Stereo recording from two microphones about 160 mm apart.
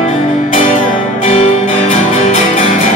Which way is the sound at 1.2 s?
50° left (ahead or behind).